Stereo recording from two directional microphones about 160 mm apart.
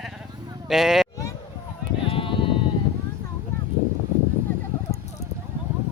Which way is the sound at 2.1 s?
35° left (ahead or behind).